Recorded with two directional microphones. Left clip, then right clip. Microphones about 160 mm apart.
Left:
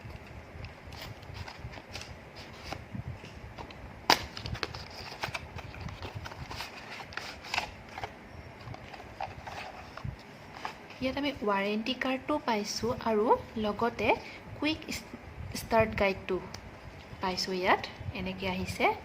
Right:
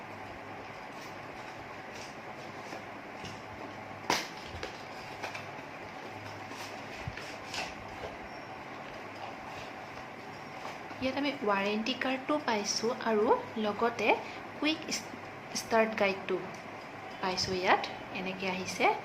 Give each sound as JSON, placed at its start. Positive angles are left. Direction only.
{"t": 11.0, "sound": "a woman's voice", "side_deg": 30}